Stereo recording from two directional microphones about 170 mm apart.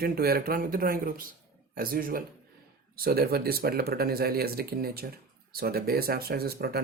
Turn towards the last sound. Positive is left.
turn(degrees=-65)  # may be behind; listen again after turning